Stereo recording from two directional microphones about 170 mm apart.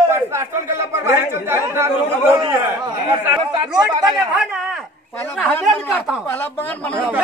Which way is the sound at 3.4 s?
30° right (ahead or behind).